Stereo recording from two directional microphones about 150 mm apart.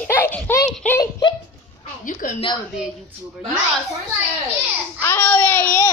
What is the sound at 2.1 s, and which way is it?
Speech, 60° left (ahead or behind).